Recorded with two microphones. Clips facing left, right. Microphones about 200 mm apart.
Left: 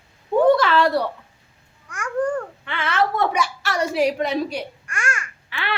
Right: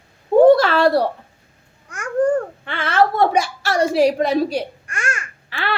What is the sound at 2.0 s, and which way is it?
Babbling, 40° right (ahead or behind).